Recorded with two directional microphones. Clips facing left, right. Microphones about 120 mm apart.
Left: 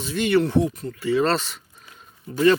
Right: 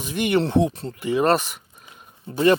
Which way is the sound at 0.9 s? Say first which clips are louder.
Right 2 dB; 15° right (ahead or behind).